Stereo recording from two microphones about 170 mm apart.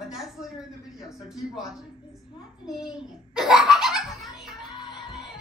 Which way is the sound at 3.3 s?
Centre (ahead or behind).